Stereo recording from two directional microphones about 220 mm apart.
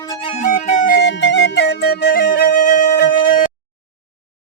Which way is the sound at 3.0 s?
40° left (ahead or behind).